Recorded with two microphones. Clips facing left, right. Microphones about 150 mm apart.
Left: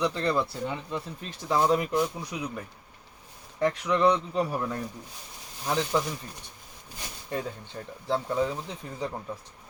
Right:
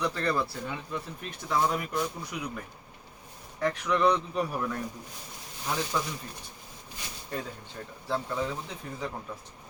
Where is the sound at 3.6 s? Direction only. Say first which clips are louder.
Left 2 dB; 20° left (ahead or behind).